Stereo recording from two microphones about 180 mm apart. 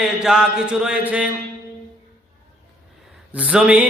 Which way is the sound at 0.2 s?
5° right (ahead or behind).